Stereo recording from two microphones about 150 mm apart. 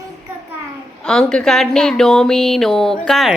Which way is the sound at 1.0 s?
5° left (ahead or behind).